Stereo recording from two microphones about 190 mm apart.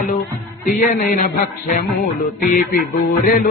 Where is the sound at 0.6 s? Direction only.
45° left (ahead or behind).